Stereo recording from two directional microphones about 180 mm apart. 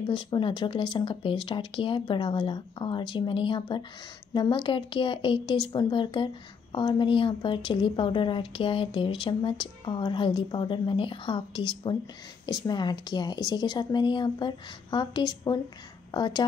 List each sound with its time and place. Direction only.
0.0 s a woman's voice: 25° left (ahead or behind)